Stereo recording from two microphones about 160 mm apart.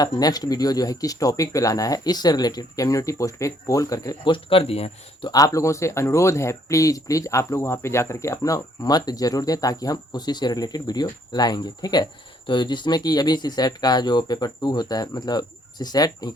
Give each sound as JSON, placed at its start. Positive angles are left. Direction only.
{"t": 0.0, "sound": "speech", "side_deg": 25}
{"t": 5.3, "sound": "speech", "side_deg": 20}